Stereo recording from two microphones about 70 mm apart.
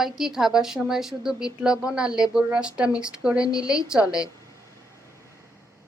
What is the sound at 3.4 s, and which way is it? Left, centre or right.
Speech, left.